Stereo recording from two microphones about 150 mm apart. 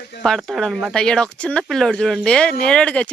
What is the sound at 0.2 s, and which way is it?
Speech, centre (ahead or behind).